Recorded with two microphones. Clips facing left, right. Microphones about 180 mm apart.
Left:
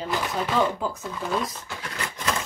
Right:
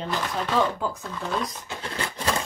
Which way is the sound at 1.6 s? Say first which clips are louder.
Right 2 dB; 25° right (ahead or behind).